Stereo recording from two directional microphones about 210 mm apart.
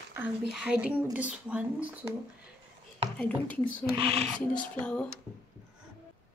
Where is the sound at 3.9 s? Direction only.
25° right (ahead or behind).